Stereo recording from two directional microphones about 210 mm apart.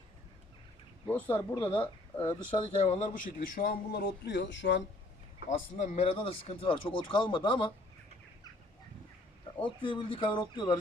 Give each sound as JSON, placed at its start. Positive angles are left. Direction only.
{"t": 1.0, "sound": "speech", "side_deg": 10}
{"t": 2.8, "sound": "speech", "side_deg": 35}
{"t": 5.5, "sound": "speech", "side_deg": 35}
{"t": 9.6, "sound": "speech", "side_deg": 25}